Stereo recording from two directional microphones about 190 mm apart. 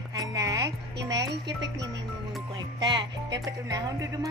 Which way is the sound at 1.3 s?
65° right (ahead or behind).